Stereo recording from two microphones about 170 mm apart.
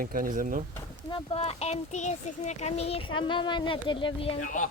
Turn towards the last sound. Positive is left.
turn(degrees=50)  # may be behind; listen again after turning